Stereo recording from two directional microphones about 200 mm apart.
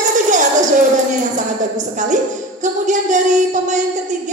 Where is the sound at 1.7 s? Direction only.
40° right (ahead or behind).